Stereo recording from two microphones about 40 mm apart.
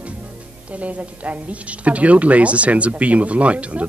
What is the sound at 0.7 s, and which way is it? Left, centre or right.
A woman's voice, right.